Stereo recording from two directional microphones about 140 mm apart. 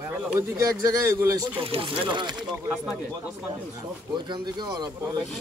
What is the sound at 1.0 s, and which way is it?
Speech, 20° right (ahead or behind).